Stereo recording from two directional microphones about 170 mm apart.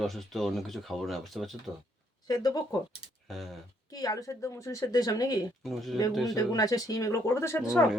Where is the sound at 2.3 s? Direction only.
20° left (ahead or behind).